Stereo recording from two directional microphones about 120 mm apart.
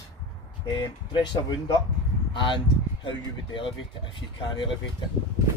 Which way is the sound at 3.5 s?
45° left (ahead or behind).